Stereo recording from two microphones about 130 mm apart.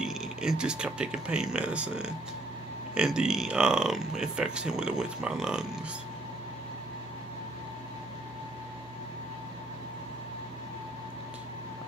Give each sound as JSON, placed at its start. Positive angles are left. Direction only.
{"t": 0.0, "sound": "speech", "side_deg": -5}